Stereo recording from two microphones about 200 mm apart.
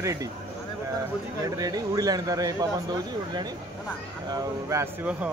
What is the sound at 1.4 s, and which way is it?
Speech, 20° right (ahead or behind).